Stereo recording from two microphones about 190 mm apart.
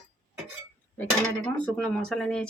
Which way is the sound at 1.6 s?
5° left (ahead or behind).